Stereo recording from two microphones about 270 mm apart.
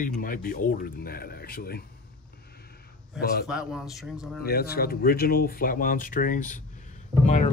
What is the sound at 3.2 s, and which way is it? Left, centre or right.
Speech, left.